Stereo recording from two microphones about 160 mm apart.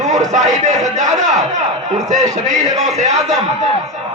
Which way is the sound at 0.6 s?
50° right (ahead or behind).